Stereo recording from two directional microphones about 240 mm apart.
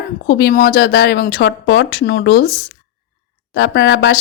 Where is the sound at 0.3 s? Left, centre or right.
Left.